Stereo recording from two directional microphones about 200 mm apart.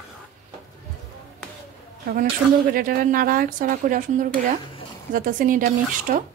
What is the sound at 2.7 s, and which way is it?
A woman's voice, 45° right (ahead or behind).